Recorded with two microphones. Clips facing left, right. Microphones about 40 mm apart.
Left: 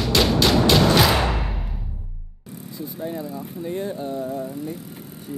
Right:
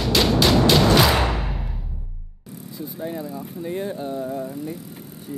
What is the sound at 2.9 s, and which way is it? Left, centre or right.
Bicycle, centre.